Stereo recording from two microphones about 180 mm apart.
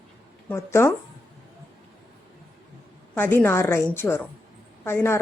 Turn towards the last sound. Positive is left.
turn(degrees=15)  # may be behind; listen again after turning